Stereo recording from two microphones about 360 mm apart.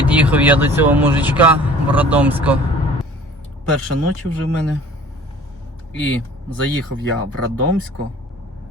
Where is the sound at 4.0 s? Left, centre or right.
Right.